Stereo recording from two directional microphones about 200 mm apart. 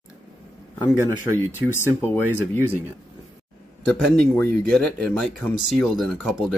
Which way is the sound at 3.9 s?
5° left (ahead or behind).